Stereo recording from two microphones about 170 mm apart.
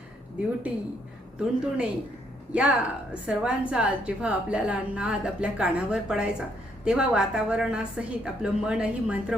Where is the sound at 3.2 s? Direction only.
5° right (ahead or behind).